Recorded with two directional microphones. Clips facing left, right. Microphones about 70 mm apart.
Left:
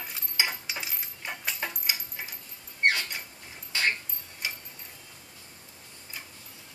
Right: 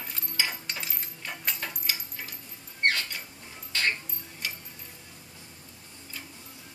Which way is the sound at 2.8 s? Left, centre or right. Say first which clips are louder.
Left 1 dB; centre.